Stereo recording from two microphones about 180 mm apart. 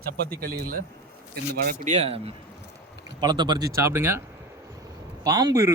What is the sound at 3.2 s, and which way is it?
Speech, 25° right (ahead or behind).